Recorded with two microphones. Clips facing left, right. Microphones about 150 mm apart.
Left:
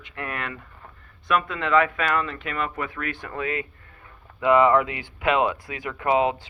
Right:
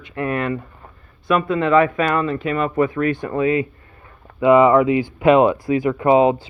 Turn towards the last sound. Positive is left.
turn(degrees=-35)  # may be behind; listen again after turning